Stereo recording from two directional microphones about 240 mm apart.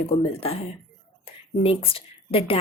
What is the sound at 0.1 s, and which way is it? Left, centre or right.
A woman's voice, left.